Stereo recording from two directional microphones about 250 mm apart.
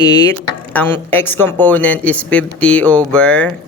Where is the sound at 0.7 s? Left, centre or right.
Centre.